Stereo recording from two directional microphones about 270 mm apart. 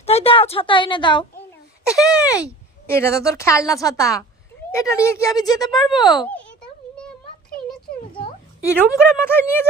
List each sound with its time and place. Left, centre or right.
0.0 s a woman's voice: left
1.9 s speech: centre
2.3 s a woman's voice: centre
6.0 s a sound: centre
8.1 s a sound: centre
8.8 s a woman's voice: centre